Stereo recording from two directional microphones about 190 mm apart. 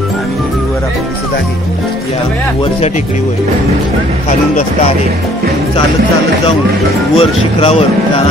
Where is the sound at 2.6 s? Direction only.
35° left (ahead or behind).